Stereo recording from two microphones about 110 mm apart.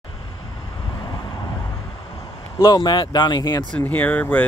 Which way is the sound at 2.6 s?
45° left (ahead or behind).